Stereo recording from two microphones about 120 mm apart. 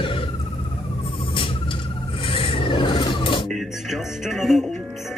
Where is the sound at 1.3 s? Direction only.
45° left (ahead or behind).